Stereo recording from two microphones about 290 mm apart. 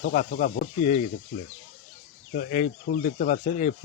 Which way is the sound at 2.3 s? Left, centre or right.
Left.